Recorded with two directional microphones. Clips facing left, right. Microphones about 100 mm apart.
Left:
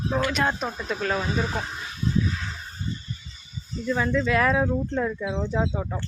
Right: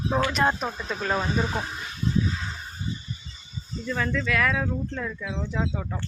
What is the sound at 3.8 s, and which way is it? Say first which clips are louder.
Speech: left 4 dB; 15° left (ahead or behind).